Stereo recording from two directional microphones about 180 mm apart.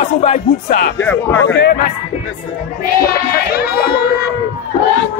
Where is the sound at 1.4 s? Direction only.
70° left (ahead or behind).